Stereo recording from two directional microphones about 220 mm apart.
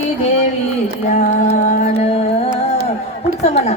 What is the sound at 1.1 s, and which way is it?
Music, 35° left (ahead or behind).